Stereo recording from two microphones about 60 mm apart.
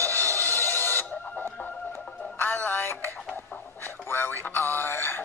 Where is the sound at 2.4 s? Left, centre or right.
Left.